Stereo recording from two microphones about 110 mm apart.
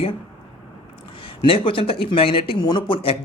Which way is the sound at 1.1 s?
55° left (ahead or behind).